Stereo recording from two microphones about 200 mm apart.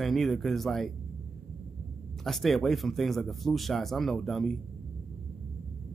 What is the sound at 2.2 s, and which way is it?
Speech, centre (ahead or behind).